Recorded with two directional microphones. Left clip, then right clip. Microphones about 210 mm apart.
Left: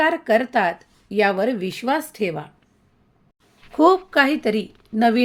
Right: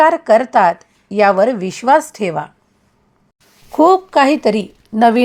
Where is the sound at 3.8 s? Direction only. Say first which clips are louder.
Right 5 dB; 25° right (ahead or behind).